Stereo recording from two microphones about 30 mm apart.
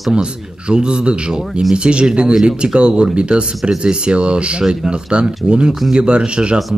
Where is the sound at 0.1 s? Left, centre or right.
Right.